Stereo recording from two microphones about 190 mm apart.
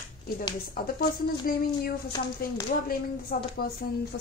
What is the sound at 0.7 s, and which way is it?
A woman's voice, 55° left (ahead or behind).